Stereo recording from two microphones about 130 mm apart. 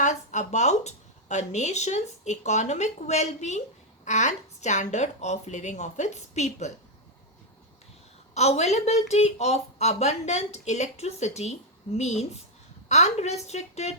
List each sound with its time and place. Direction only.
0.0 s a woman's voice: 65° left (ahead or behind)
8.3 s a woman's voice: 55° left (ahead or behind)